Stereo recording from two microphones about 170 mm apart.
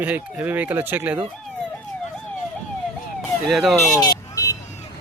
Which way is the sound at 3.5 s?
Centre (ahead or behind).